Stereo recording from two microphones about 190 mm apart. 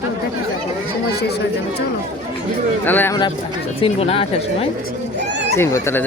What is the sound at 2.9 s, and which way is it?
Speech, 10° left (ahead or behind).